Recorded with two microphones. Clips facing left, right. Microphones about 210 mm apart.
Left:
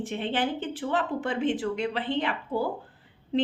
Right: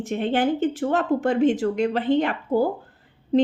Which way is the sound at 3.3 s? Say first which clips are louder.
Right 7 dB; 40° right (ahead or behind).